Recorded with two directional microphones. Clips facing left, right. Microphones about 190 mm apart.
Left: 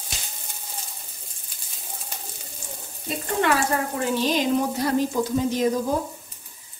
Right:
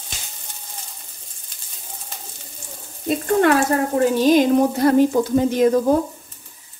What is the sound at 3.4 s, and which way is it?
Speech, 45° right (ahead or behind).